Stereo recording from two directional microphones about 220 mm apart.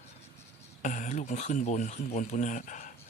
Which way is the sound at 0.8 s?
35° left (ahead or behind).